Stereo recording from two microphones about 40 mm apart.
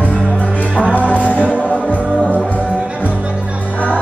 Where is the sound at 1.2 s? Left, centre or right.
Left.